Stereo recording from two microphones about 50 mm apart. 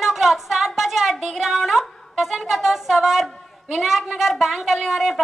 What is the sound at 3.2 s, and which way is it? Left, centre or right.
A woman's voice, centre.